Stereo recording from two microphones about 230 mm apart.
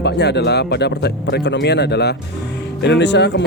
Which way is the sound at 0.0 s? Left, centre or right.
Left.